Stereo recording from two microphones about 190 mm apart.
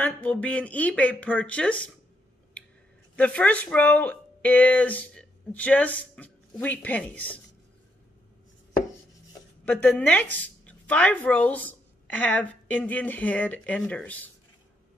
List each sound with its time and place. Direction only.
0.0 s speech: 5° left (ahead or behind)
3.2 s speech: 5° left (ahead or behind)
9.7 s speech: 10° left (ahead or behind)
10.2 s a woman's voice: 70° right (ahead or behind)
10.6 s a woman's voice: 5° left (ahead or behind)